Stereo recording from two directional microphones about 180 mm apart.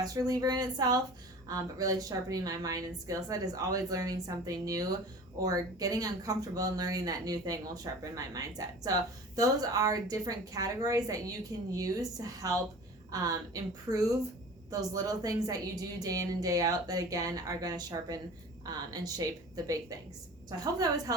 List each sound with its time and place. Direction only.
0.0 s speech: 20° right (ahead or behind)